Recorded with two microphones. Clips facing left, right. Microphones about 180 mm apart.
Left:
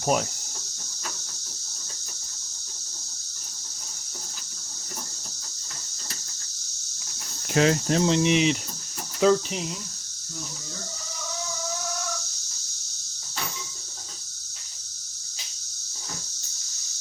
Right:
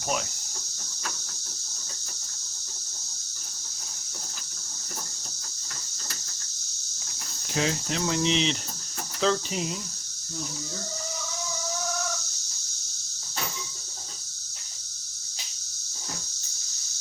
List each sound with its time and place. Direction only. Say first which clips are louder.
0.0 s speech: left 6 dB; 45° left (ahead or behind)
7.5 s cricket: left 7 dB; 65° left (ahead or behind)
8.0 s speech: left 4 dB; 25° left (ahead or behind)
8.3 s speech: left 4 dB; 10° left (ahead or behind)